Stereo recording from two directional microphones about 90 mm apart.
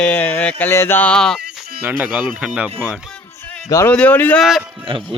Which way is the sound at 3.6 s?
40° left (ahead or behind).